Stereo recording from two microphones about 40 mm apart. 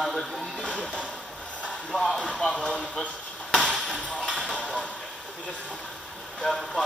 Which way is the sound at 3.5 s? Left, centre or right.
Centre.